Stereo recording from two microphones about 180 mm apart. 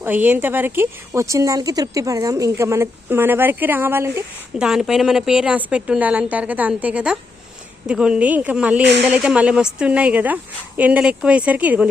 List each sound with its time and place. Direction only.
0.0 s speech: 10° right (ahead or behind)
8.8 s speech: 70° right (ahead or behind)
9.0 s speech: 5° right (ahead or behind)